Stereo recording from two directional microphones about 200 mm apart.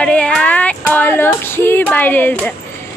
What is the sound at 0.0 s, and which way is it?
Speech, 5° left (ahead or behind).